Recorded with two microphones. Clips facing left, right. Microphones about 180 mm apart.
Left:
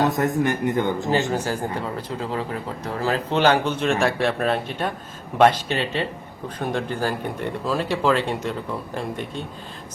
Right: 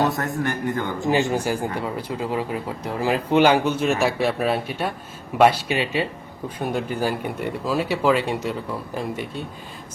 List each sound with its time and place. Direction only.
0.0 s a man's voice: 15° left (ahead or behind)
1.1 s speech: 15° right (ahead or behind)